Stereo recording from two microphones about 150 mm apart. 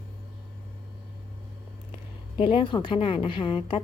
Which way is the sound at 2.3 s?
35° left (ahead or behind).